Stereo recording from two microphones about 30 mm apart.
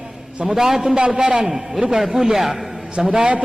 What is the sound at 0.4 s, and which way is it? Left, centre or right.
Speech, centre.